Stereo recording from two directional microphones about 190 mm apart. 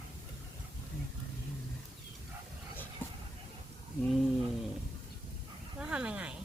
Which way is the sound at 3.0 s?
10° left (ahead or behind).